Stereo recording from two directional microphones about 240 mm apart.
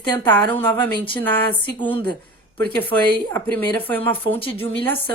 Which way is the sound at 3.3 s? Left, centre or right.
Centre.